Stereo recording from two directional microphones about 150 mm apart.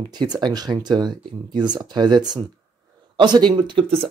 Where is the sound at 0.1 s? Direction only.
30° right (ahead or behind).